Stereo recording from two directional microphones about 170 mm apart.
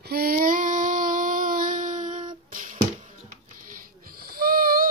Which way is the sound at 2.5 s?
50° right (ahead or behind).